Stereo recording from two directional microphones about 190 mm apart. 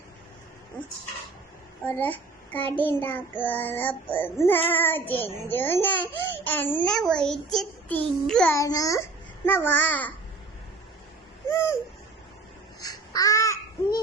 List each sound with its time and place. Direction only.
1.8 s child singing: 10° left (ahead or behind)
6.3 s a child's voice: 10° left (ahead or behind)
8.5 s child singing: 20° left (ahead or behind)
11.4 s a sound: 15° left (ahead or behind)
12.8 s babbling: 20° left (ahead or behind)